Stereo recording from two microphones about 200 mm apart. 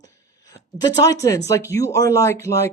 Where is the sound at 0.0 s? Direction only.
15° left (ahead or behind).